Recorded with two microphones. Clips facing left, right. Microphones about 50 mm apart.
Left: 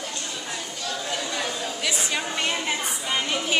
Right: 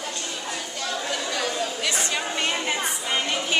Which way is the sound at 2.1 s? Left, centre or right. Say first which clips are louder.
Even; centre.